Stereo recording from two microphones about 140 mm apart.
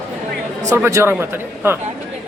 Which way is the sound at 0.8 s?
20° right (ahead or behind).